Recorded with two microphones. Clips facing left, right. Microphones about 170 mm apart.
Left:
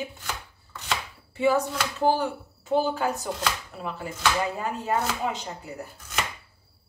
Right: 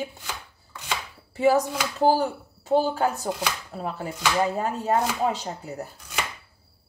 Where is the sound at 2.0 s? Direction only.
35° right (ahead or behind).